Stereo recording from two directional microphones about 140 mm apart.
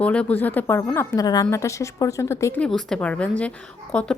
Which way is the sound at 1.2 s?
30° left (ahead or behind).